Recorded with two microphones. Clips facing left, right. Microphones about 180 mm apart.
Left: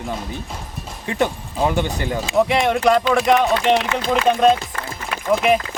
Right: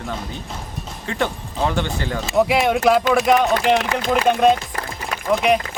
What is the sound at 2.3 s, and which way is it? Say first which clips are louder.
Speech: right 1 dB; 5° right (ahead or behind).